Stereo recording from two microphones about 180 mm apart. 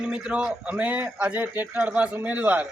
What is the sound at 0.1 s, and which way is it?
A man's voice, 5° right (ahead or behind).